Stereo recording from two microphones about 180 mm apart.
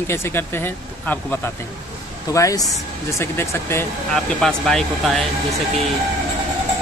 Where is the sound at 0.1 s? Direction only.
15° left (ahead or behind).